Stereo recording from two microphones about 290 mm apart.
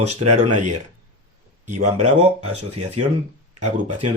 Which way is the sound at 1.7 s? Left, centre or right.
Right.